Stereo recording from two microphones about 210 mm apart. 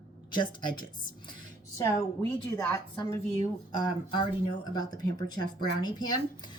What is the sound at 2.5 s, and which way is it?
A woman's voice, 15° left (ahead or behind).